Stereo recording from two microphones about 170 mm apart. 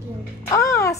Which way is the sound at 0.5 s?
20° left (ahead or behind).